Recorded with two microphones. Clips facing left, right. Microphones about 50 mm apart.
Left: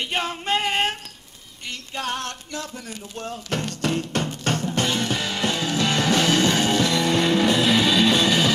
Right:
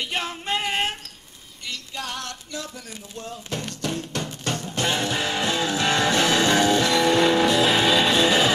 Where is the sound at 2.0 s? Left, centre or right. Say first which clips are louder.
Left 6 dB; left.